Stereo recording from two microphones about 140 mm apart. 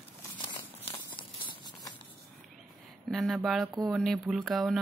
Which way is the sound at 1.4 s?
35° left (ahead or behind).